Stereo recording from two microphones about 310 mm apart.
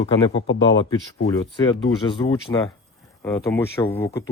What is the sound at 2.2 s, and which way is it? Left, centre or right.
Speech, centre.